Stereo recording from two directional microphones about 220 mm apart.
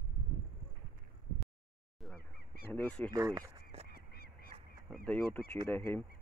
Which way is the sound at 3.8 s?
45° left (ahead or behind).